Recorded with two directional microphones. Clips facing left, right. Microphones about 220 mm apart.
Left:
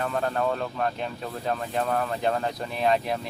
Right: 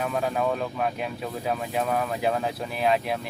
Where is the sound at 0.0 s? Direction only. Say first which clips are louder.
Right 1 dB; 5° right (ahead or behind).